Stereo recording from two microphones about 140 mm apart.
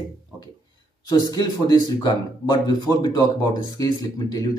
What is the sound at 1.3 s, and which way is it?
Speech, 30° left (ahead or behind).